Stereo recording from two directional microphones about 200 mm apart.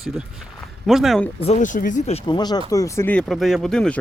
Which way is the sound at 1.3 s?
35° left (ahead or behind).